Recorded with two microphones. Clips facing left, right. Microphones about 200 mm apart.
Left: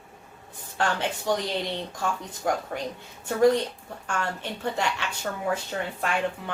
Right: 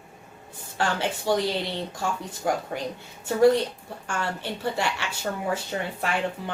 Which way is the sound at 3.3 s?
10° right (ahead or behind).